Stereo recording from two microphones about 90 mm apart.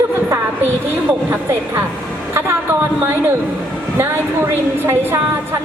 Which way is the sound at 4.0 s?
25° right (ahead or behind).